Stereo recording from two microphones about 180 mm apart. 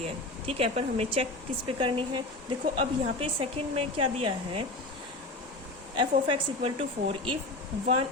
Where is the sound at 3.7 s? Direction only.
30° right (ahead or behind).